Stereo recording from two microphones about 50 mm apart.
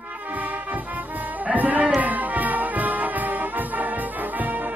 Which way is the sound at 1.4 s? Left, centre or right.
Right.